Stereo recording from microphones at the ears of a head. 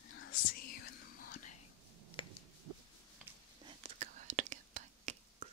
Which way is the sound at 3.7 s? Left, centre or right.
Right.